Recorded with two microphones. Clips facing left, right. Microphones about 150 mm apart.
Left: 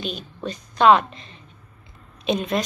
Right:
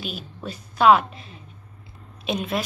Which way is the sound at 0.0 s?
5° right (ahead or behind).